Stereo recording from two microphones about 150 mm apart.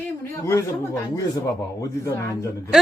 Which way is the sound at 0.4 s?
20° left (ahead or behind).